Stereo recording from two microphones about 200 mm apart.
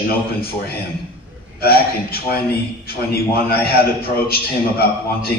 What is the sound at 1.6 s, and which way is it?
A man's voice, 50° left (ahead or behind).